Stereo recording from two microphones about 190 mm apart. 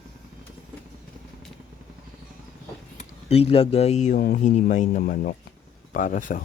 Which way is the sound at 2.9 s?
30° left (ahead or behind).